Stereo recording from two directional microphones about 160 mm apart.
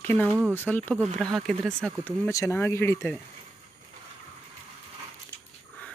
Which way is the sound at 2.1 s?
15° left (ahead or behind).